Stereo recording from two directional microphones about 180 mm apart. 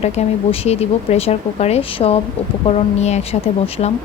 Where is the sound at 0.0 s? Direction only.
35° left (ahead or behind).